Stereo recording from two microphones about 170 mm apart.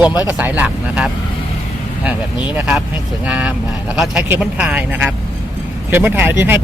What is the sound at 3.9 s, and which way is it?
Speech, 5° right (ahead or behind).